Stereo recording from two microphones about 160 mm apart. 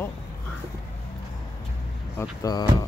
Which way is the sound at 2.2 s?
20° left (ahead or behind).